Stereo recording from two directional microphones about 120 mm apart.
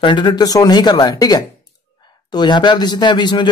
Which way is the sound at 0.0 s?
40° left (ahead or behind).